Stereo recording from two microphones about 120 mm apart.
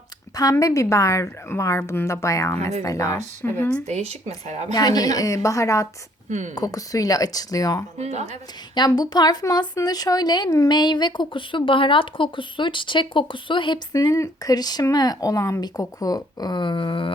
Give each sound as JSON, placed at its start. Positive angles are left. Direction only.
{"t": 0.3, "sound": "a woman's voice", "side_deg": 30}
{"t": 3.8, "sound": "a woman's voice", "side_deg": -65}
{"t": 4.7, "sound": "a woman's voice", "side_deg": 35}
{"t": 7.9, "sound": "speech", "side_deg": -65}
{"t": 8.7, "sound": "speech", "side_deg": 35}
{"t": 13.9, "sound": "speech", "side_deg": 30}